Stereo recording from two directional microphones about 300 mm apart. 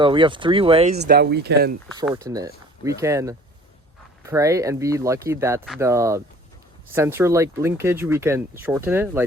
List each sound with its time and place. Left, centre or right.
0.0 s speech: centre
0.9 s speech: right
2.0 s speech: centre